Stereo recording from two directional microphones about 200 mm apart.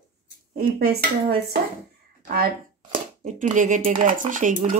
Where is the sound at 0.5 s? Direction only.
50° right (ahead or behind).